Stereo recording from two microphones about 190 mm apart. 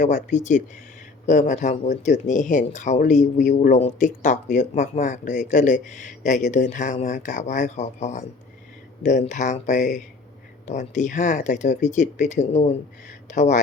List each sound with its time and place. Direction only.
0.0 s speech: 40° left (ahead or behind)